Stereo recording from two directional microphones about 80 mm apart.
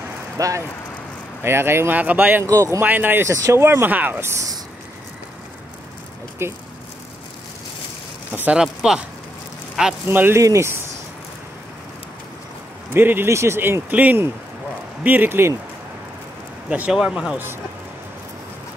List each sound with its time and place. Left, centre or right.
0.4 s speech: right
1.4 s speech: right
2.4 s speech: right
2.8 s speech: right
3.3 s speech: right
6.4 s speech: right
8.5 s speech: centre
10.0 s speech: right
12.9 s speech: right
16.6 s speech: centre
16.9 s speech: centre